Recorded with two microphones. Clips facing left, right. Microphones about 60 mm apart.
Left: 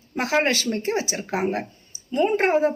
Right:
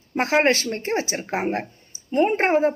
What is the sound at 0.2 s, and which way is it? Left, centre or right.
Speech, right.